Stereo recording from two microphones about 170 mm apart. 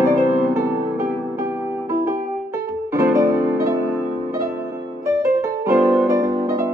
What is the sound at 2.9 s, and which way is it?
Music, 15° right (ahead or behind).